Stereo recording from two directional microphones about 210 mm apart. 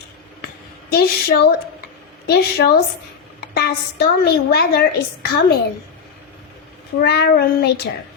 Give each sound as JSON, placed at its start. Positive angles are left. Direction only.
{"t": 0.9, "sound": "a woman's voice", "side_deg": 50}
{"t": 7.0, "sound": "a woman's voice", "side_deg": 50}